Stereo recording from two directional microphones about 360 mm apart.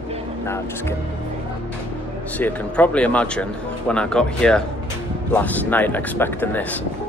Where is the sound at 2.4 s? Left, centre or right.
Centre.